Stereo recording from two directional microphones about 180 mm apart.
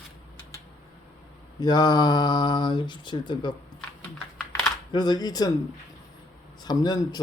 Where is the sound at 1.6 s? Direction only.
25° left (ahead or behind).